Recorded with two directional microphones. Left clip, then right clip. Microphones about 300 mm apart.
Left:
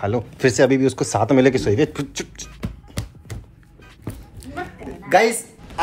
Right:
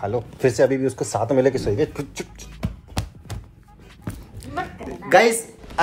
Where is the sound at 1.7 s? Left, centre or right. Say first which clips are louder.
Left 3 dB; left.